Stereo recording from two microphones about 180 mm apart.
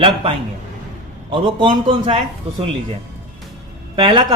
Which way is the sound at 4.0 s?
25° right (ahead or behind).